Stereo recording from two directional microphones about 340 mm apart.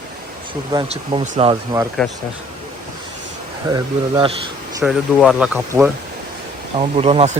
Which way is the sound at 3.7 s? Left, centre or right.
Centre.